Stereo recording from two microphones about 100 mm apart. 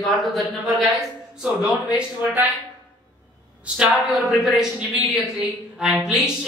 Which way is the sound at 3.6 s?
5° right (ahead or behind).